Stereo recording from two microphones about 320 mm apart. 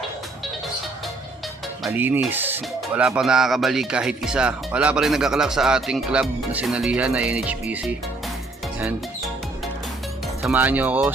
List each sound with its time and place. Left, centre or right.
1.8 s speech: centre
8.8 s music: centre
10.4 s speech: centre